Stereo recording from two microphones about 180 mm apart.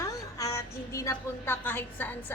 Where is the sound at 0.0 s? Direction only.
20° left (ahead or behind).